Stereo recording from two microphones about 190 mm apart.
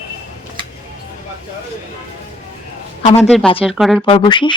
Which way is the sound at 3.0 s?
35° left (ahead or behind).